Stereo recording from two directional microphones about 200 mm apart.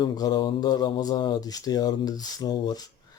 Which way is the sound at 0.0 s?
20° left (ahead or behind).